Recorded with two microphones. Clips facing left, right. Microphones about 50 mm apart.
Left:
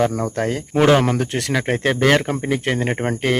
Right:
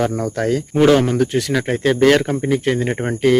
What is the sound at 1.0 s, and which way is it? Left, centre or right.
Speech, left.